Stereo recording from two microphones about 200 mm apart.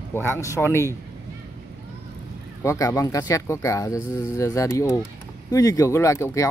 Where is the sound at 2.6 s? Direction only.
15° left (ahead or behind).